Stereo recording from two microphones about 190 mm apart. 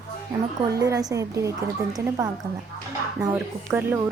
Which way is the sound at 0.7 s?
15° right (ahead or behind).